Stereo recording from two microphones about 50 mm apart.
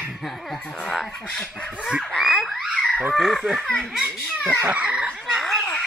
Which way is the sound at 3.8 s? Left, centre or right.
Right.